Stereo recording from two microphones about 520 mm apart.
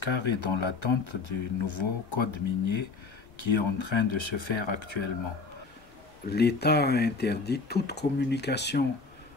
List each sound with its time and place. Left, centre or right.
0.0 s speech: left
6.3 s speech: centre